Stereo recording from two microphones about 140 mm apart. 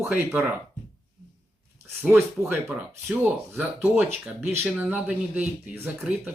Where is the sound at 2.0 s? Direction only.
15° right (ahead or behind).